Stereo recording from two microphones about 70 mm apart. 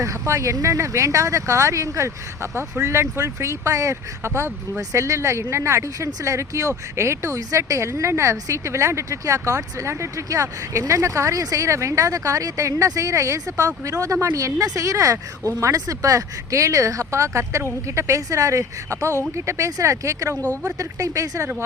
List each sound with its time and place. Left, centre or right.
0.0 s speech: right
20.3 s speech: left
20.7 s speech: right